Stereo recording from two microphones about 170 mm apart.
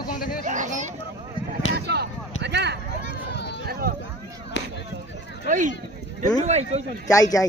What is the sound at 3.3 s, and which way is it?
Run, 80° left.